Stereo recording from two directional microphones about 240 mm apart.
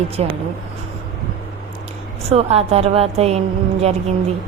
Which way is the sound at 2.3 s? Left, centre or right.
Right.